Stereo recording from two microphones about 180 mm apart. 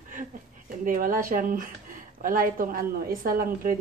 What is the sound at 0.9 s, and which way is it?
A woman's voice, 50° right (ahead or behind).